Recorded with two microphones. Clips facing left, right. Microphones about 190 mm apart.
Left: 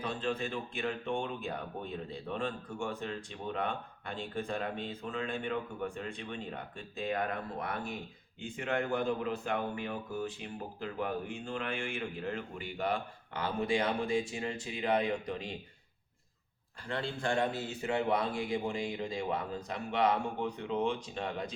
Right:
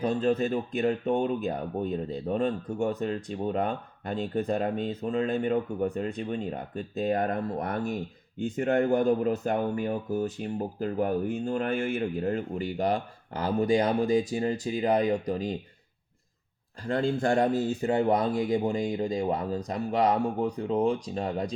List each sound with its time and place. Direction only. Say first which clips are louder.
0.0 s speech: right 10 dB; 40° right (ahead or behind)
16.8 s speech: right 9 dB; 45° right (ahead or behind)